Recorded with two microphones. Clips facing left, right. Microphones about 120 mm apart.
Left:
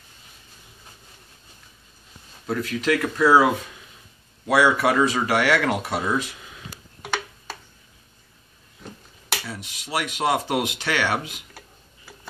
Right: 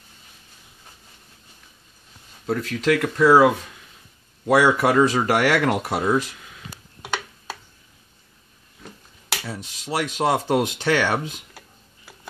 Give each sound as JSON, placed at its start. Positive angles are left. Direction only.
{"t": 2.4, "sound": "speech", "side_deg": -40}
{"t": 4.5, "sound": "speech", "side_deg": -45}
{"t": 6.0, "sound": "speech", "side_deg": 0}
{"t": 9.5, "sound": "speech", "side_deg": -40}